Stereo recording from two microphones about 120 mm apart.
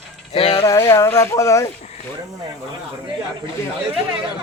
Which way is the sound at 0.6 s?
25° left (ahead or behind).